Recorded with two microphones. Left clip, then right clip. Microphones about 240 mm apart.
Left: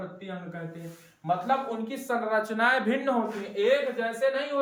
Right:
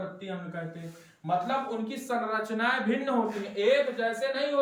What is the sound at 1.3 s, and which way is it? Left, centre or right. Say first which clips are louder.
Speech: left 2 dB; centre.